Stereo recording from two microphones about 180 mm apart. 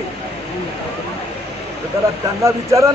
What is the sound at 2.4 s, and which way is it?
Speech, 15° right (ahead or behind).